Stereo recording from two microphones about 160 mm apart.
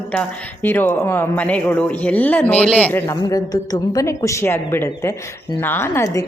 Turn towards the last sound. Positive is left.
turn(degrees=20)  # may be behind; listen again after turning